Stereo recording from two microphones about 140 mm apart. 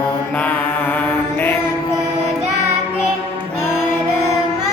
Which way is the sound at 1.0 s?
15° left (ahead or behind).